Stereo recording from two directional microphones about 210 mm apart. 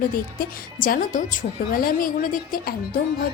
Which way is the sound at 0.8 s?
40° left (ahead or behind).